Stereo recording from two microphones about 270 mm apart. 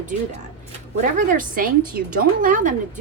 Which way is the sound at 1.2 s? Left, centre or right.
Right.